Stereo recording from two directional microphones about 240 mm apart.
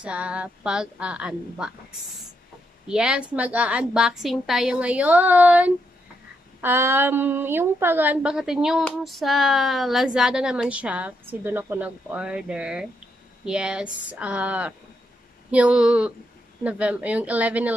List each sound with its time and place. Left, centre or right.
0.0 s a woman's voice: centre